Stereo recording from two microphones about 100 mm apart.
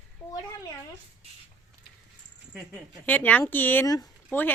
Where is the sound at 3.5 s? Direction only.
20° left (ahead or behind).